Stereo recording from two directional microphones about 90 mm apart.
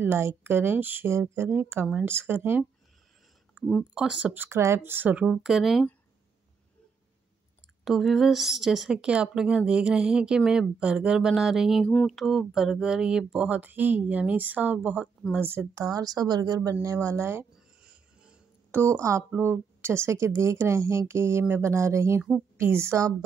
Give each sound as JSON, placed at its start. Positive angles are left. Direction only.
{"t": 0.0, "sound": "speech", "side_deg": -30}
{"t": 3.5, "sound": "speech", "side_deg": 10}
{"t": 3.9, "sound": "speech", "side_deg": -10}
{"t": 4.3, "sound": "speech", "side_deg": -25}
{"t": 5.2, "sound": "a woman's voice", "side_deg": -5}
{"t": 7.8, "sound": "a woman's voice", "side_deg": 0}
{"t": 11.8, "sound": "speech", "side_deg": 15}
{"t": 12.1, "sound": "speech", "side_deg": 0}
{"t": 15.8, "sound": "speech", "side_deg": -45}
{"t": 17.8, "sound": "music", "side_deg": -10}
{"t": 18.7, "sound": "speech", "side_deg": -30}